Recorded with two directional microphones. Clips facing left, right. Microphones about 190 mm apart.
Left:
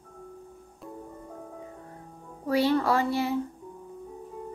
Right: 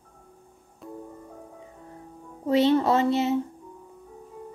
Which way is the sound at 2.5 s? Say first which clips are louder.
Right 3 dB; 20° right (ahead or behind).